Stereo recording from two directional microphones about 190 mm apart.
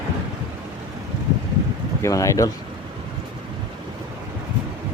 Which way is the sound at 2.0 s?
15° left (ahead or behind).